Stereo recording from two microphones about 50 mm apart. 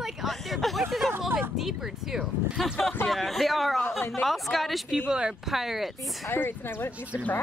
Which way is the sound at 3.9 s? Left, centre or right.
Left.